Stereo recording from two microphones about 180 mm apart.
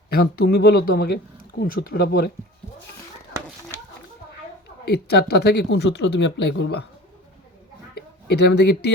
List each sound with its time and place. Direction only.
0.1 s speech: 60° left (ahead or behind)
5.1 s speech: 65° left (ahead or behind)
7.9 s speech: 65° left (ahead or behind)